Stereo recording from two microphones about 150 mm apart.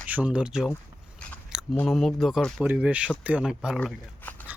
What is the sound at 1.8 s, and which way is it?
Speech, centre (ahead or behind).